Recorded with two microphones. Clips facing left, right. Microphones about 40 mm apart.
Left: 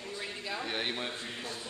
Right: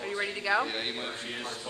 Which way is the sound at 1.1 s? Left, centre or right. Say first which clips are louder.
Right 3 dB; right.